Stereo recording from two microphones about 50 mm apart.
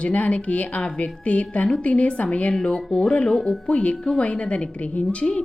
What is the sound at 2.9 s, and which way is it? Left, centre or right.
Speech, left.